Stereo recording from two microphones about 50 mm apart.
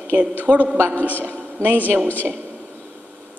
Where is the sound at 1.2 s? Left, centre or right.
Right.